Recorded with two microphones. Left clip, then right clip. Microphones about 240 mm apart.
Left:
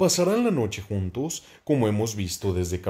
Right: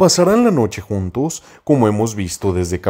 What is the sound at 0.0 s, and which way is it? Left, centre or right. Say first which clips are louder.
Speech: right 10 dB; right.